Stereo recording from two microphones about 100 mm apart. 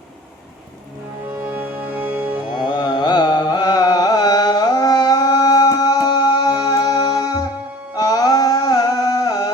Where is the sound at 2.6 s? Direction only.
45° left (ahead or behind).